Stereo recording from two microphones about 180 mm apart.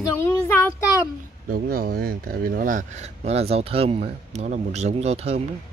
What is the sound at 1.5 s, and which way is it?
A man's voice, 55° right (ahead or behind).